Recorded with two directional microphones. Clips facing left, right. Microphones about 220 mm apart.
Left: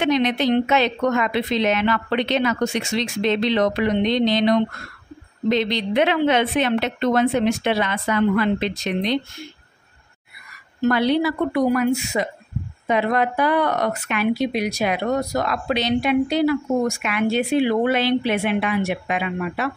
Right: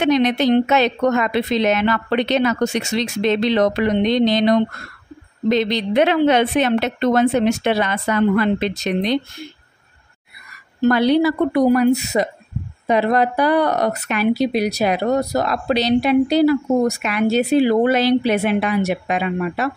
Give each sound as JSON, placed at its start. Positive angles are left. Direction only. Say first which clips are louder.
{"t": 0.0, "sound": "a woman's voice", "louder": "right 3 dB", "side_deg": -40}
{"t": 10.8, "sound": "speech", "louder": "right 4 dB", "side_deg": -40}